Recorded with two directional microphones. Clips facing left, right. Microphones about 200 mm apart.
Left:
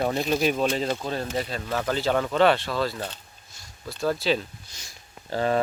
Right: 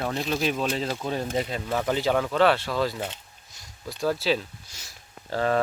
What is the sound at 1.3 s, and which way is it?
Speech, 20° right (ahead or behind).